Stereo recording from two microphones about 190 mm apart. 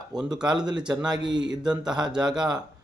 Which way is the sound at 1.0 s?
20° right (ahead or behind).